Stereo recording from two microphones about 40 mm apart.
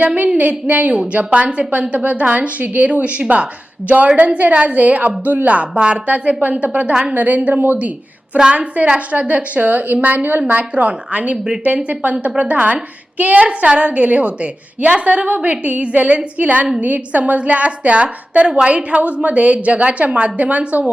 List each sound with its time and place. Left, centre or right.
0.3 s a woman's voice: right